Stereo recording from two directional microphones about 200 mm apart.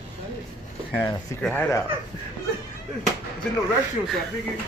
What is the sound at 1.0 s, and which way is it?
Speech, 15° left (ahead or behind).